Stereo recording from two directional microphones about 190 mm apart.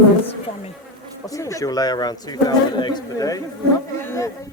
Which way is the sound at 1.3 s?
15° left (ahead or behind).